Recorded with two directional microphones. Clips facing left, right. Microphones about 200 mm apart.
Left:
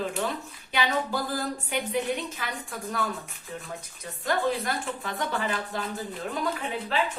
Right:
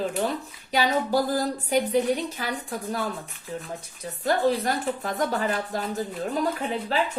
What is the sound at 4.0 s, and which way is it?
A woman's voice, 35° right (ahead or behind).